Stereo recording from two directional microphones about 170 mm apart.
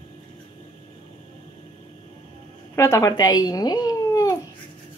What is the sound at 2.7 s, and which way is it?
Speech, 15° left (ahead or behind).